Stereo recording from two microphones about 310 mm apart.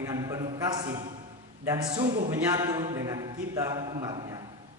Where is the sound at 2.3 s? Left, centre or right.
Centre.